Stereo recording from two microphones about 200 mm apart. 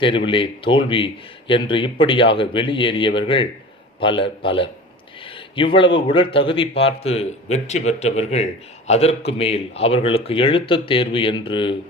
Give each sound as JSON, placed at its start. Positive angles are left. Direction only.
{"t": 0.3, "sound": "a man's voice", "side_deg": 25}